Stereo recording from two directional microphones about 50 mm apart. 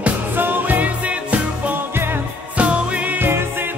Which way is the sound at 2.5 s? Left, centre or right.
Right.